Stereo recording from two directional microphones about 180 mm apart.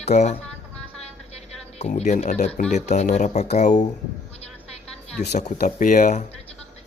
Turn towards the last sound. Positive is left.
turn(degrees=45)  # may be behind; listen again after turning